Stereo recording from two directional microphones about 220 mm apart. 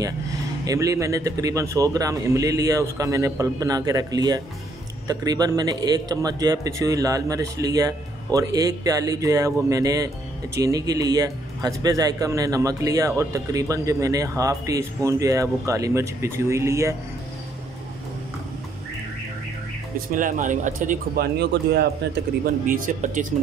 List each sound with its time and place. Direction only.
0.7 s a man's voice: 15° right (ahead or behind)
20.1 s speech: 35° right (ahead or behind)
21.5 s speech: 50° right (ahead or behind)